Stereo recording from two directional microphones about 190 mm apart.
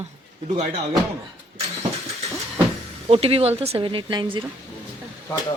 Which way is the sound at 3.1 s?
30° right (ahead or behind).